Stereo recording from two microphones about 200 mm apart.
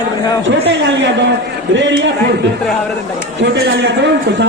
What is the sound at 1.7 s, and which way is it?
Speech, 65° right (ahead or behind).